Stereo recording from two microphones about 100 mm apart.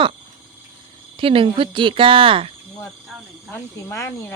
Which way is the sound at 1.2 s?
65° right (ahead or behind).